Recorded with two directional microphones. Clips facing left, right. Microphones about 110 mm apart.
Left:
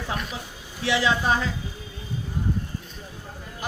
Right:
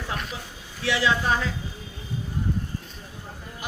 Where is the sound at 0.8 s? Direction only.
20° left (ahead or behind).